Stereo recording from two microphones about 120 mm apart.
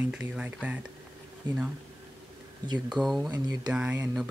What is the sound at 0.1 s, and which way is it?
Speech, 10° right (ahead or behind).